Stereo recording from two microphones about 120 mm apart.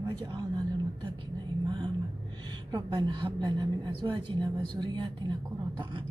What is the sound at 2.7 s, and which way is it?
A woman's voice, 35° right (ahead or behind).